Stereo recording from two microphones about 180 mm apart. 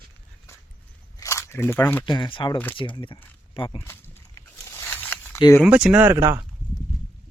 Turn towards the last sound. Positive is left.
turn(degrees=-15)  # may be behind; listen again after turning